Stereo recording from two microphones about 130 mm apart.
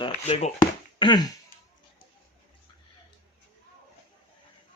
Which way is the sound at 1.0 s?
35° left (ahead or behind).